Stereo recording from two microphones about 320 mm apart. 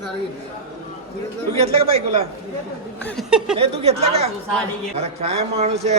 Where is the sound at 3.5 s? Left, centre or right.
Centre.